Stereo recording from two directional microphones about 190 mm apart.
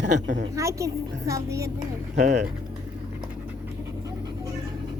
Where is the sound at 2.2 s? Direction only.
40° right (ahead or behind).